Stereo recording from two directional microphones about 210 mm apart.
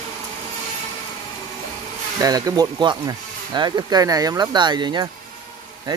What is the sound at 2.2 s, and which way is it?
Speech, 20° right (ahead or behind).